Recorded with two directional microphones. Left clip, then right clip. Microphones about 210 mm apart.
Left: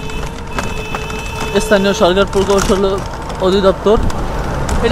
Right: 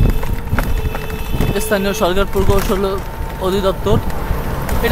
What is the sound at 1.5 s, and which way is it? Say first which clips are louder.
Speech: left 6 dB; 10° left (ahead or behind).